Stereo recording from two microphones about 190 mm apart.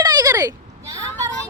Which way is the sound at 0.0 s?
20° right (ahead or behind).